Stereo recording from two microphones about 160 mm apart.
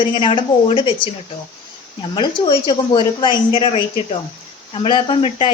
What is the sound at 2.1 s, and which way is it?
A woman's voice, 30° left (ahead or behind).